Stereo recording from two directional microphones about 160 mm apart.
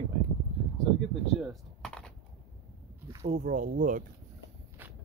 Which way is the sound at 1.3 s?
Centre (ahead or behind).